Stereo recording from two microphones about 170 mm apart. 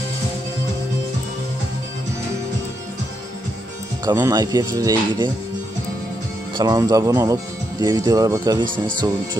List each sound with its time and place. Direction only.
4.0 s speech: 20° right (ahead or behind)
6.5 s speech: 25° right (ahead or behind)